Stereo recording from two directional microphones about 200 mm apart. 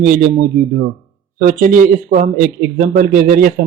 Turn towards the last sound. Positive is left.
turn(degrees=-45)  # may be behind; listen again after turning